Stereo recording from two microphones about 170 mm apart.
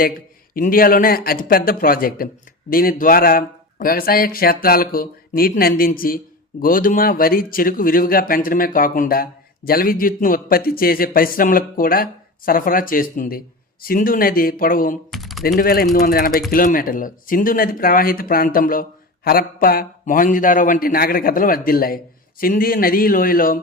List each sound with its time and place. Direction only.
0.5 s speech: 55° left (ahead or behind)
15.1 s typing: centre (ahead or behind)
15.5 s speech: 60° left (ahead or behind)